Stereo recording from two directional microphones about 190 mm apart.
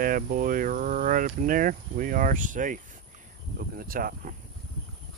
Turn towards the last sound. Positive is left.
turn(degrees=-45)  # may be behind; listen again after turning